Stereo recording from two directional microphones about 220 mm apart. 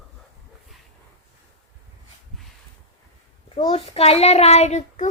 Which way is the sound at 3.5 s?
25° left (ahead or behind).